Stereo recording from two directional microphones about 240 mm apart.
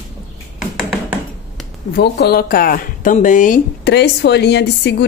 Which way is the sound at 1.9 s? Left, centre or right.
Left.